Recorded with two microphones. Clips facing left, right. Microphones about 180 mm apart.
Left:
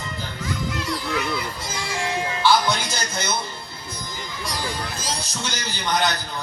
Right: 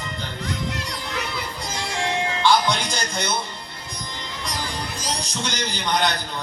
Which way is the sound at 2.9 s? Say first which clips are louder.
Right 1 dB; 5° left (ahead or behind).